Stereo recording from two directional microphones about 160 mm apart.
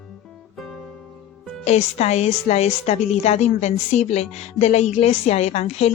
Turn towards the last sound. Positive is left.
turn(degrees=40)  # may be behind; listen again after turning